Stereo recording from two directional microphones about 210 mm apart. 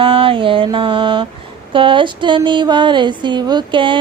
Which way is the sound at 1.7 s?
25° right (ahead or behind).